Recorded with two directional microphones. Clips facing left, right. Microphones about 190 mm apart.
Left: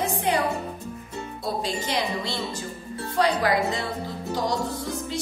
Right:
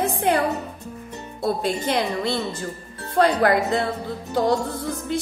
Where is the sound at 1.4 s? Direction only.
55° right (ahead or behind).